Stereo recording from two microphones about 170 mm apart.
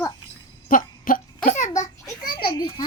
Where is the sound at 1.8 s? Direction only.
25° left (ahead or behind).